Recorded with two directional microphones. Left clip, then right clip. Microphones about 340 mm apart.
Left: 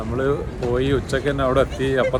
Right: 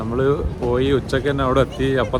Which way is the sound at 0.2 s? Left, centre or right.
Centre.